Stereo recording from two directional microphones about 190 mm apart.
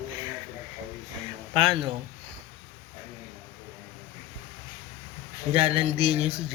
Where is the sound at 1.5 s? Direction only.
25° right (ahead or behind).